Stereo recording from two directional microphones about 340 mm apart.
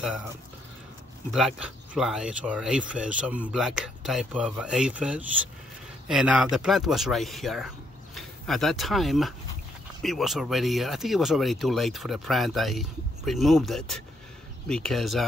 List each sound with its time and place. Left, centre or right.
1.3 s speech: centre